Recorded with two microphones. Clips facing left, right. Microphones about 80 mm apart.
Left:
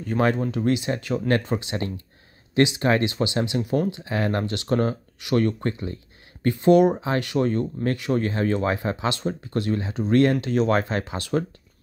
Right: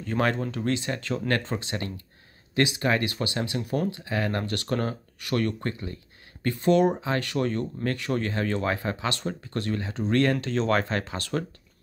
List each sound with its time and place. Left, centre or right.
0.2 s speech: centre